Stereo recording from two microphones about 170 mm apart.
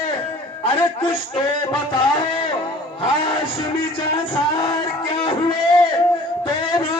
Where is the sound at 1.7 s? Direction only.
30° left (ahead or behind).